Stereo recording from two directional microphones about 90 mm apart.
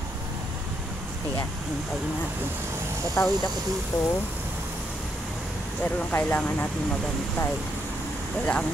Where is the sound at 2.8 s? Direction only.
30° right (ahead or behind).